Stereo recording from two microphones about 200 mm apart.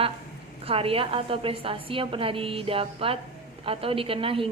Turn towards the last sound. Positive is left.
turn(degrees=-25)  # may be behind; listen again after turning